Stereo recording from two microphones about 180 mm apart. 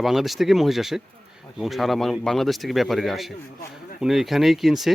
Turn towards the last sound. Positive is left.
turn(degrees=0)  # may be behind; listen again after turning